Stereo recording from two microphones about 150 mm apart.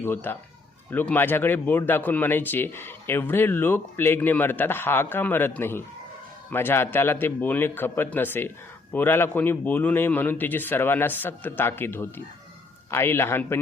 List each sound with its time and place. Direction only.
0.0 s speech: 15° left (ahead or behind)